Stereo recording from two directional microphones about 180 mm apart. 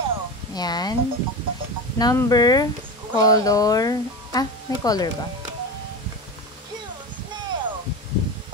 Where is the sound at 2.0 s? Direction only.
20° left (ahead or behind).